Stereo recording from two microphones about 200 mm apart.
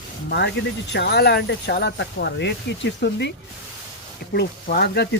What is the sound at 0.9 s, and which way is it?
Speech, 55° left (ahead or behind).